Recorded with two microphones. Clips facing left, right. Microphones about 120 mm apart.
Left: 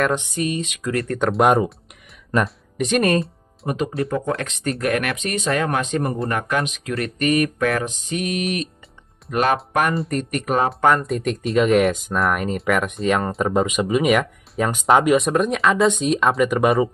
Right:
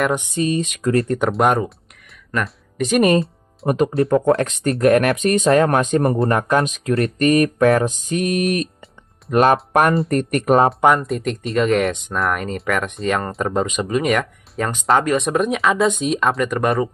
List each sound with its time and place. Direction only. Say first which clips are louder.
0.0 s speech: right 1 dB; 10° right (ahead or behind)
0.3 s mantra: right 4 dB; 35° right (ahead or behind)
1.2 s speech: left 5 dB; centre (ahead or behind)
3.6 s speech: right 6 dB; 45° right (ahead or behind)
4.1 s mantra: right 8 dB; 30° right (ahead or behind)
5.5 s speech: right 5 dB; 40° right (ahead or behind)
6.2 s mantra: right 5 dB; 35° right (ahead or behind)
9.3 s speech: right 5 dB; 45° right (ahead or behind)
10.0 s speech: right 5 dB; 60° right (ahead or behind)
10.4 s mantra: right 6 dB; 40° right (ahead or behind)
11.0 s speech: even; centre (ahead or behind)
15.1 s speech: even; centre (ahead or behind)